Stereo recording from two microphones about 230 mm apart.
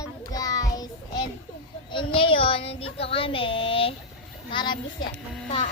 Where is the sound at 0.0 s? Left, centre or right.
Centre.